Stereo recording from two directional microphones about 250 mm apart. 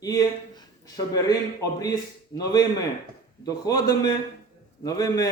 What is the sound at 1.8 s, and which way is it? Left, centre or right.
A man's voice, centre.